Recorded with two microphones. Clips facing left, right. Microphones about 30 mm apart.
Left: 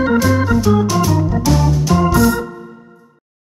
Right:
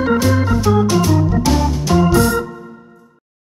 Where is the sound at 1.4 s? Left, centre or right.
Centre.